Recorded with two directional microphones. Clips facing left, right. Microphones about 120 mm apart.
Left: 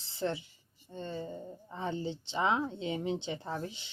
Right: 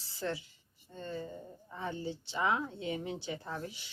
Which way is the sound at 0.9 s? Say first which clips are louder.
Left 2 dB; 20° left (ahead or behind).